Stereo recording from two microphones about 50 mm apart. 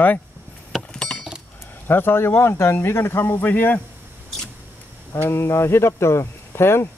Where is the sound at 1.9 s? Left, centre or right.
Left.